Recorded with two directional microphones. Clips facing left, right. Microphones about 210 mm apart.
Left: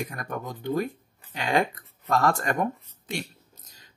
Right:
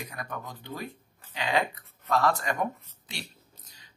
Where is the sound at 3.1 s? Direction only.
45° left (ahead or behind).